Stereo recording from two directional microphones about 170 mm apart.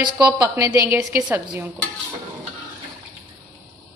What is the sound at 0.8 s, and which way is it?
Speech, 10° right (ahead or behind).